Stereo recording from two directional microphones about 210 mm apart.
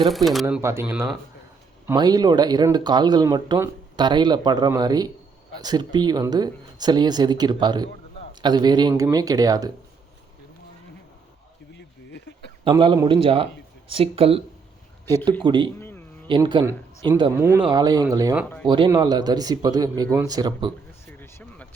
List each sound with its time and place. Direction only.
0.1 s speech: centre (ahead or behind)
0.4 s speech: 10° right (ahead or behind)
11.7 s a sound: 55° left (ahead or behind)
12.6 s speech: 25° right (ahead or behind)
15.4 s speech: 20° right (ahead or behind)
15.8 s a sound: 10° left (ahead or behind)
16.2 s a man's voice: 20° right (ahead or behind)
17.3 s speech: 10° right (ahead or behind)
18.4 s speech: 5° left (ahead or behind)
18.7 s speech: 20° right (ahead or behind)
21.1 s a sound: 10° left (ahead or behind)